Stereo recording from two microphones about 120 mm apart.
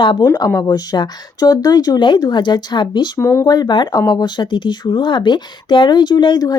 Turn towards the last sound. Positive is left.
turn(degrees=35)  # may be behind; listen again after turning